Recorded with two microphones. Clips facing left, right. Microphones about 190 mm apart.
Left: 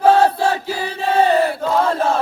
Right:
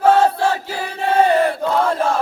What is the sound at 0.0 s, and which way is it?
Chant, 10° left (ahead or behind).